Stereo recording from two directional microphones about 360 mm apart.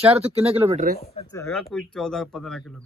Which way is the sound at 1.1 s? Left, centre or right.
Centre.